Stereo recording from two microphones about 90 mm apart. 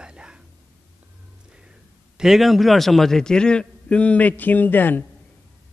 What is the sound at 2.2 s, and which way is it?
A man's voice, 5° right (ahead or behind).